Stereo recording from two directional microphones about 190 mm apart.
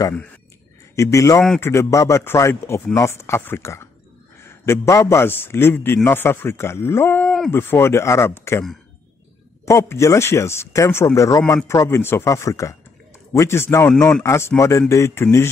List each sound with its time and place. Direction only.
0.9 s a man's voice: 15° left (ahead or behind)
9.7 s speech: 15° left (ahead or behind)